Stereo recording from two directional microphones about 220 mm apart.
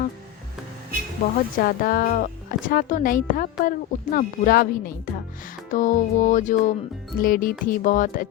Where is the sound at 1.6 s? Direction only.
40° left (ahead or behind).